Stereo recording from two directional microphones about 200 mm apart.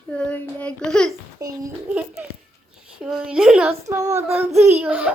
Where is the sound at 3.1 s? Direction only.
5° right (ahead or behind).